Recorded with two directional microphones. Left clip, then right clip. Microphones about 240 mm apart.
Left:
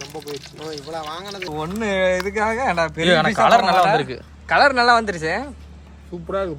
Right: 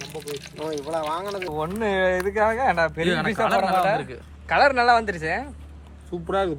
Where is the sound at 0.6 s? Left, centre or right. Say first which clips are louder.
Right 4 dB; centre.